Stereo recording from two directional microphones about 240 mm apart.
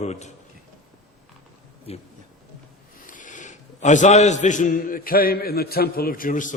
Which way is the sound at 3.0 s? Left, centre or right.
Left.